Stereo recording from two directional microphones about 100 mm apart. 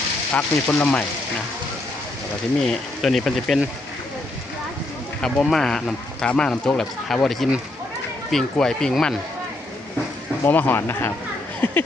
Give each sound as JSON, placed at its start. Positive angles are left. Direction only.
{"t": 0.3, "sound": "speech", "side_deg": 15}
{"t": 2.6, "sound": "speech", "side_deg": 0}
{"t": 5.2, "sound": "speech", "side_deg": 5}
{"t": 10.4, "sound": "speech", "side_deg": 20}
{"t": 11.6, "sound": "a sound", "side_deg": 20}